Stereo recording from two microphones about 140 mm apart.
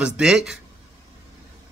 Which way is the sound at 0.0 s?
5° right (ahead or behind).